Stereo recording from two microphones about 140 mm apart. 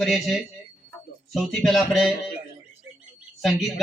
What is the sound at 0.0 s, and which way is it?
Speech, centre (ahead or behind).